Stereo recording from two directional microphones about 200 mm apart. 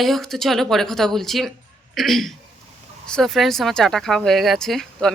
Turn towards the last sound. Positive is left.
turn(degrees=5)  # may be behind; listen again after turning